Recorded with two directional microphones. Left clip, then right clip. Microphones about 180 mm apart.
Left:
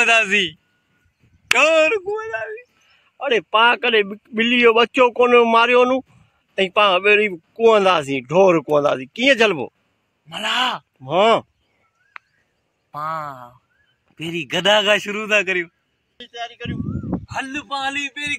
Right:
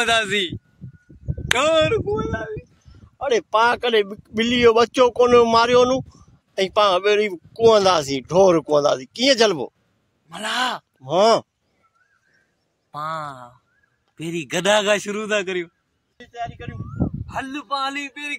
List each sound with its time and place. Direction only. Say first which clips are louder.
0.0 s speech: left 4 dB; 15° right (ahead or behind)
1.5 s speech: left 3 dB; 5° right (ahead or behind)
8.4 s speech: left 1 dB; 5° left (ahead or behind)
8.6 s speech: left 1 dB; 10° right (ahead or behind)
10.4 s speech: left 3 dB; 20° right (ahead or behind)
11.0 s speech: left 1 dB; 10° right (ahead or behind)
12.9 s speech: left 2 dB; 15° right (ahead or behind)
17.3 s speech: left 1 dB; 5° left (ahead or behind)